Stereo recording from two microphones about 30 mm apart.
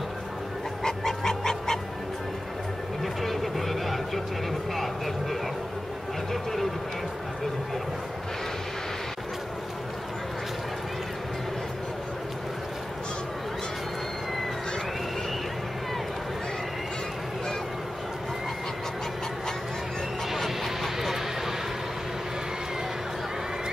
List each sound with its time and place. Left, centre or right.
0.8 s a sound: centre
3.0 s vehicle: centre
4.7 s music: centre
20.4 s vehicle: centre